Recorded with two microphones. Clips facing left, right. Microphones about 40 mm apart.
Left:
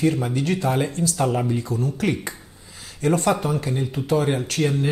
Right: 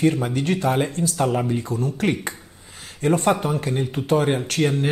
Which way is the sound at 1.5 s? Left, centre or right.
Right.